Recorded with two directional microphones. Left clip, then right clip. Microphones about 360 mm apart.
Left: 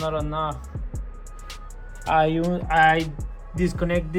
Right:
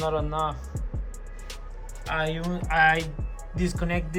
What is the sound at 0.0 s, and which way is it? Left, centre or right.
Speech, centre.